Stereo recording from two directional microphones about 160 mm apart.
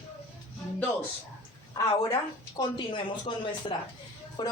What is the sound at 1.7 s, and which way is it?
A woman's voice, 25° left (ahead or behind).